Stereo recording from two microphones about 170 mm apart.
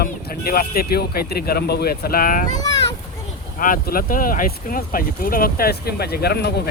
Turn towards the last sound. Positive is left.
turn(degrees=70)  # may be behind; listen again after turning